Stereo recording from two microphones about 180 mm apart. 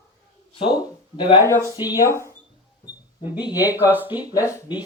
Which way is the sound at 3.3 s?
20° left (ahead or behind).